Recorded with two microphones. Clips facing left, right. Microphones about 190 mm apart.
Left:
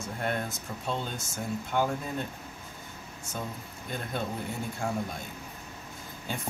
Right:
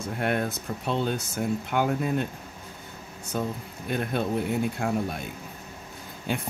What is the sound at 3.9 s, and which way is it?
Speech, 65° right (ahead or behind).